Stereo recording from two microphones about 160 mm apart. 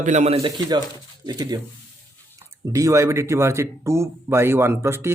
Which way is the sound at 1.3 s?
25° right (ahead or behind).